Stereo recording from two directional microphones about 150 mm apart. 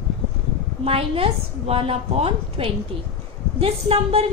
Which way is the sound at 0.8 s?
40° right (ahead or behind).